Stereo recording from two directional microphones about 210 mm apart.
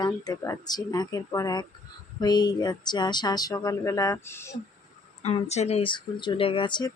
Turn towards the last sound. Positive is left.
turn(degrees=20)  # may be behind; listen again after turning